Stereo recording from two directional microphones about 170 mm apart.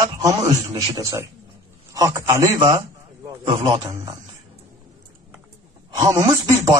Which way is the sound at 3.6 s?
30° right (ahead or behind).